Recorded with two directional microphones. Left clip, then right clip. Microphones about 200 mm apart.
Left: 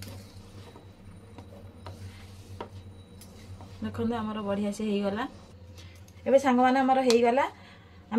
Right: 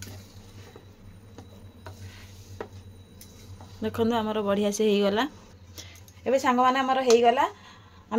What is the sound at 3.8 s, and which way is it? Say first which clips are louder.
A woman's voice: right 7 dB; 50° right (ahead or behind).